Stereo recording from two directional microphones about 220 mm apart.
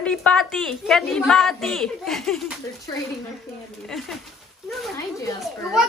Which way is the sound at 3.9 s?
Centre (ahead or behind).